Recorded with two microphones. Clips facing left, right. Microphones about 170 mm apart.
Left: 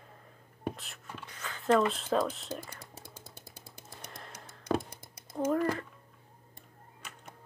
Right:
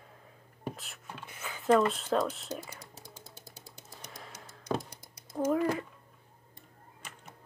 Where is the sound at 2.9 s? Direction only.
55° left (ahead or behind).